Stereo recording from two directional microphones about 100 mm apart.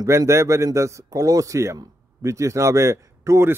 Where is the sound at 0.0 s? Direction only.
30° right (ahead or behind).